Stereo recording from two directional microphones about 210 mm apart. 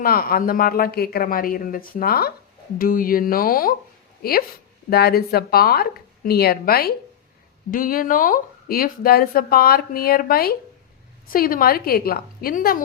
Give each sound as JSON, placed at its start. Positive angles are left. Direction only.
{"t": 0.0, "sound": "speech", "side_deg": 45}